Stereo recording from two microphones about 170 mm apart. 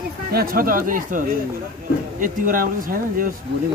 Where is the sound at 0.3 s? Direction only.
60° right (ahead or behind).